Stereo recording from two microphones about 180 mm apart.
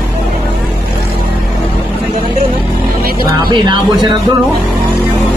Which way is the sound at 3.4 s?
25° right (ahead or behind).